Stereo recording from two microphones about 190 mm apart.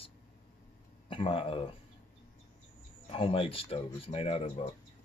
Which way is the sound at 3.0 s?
30° left (ahead or behind).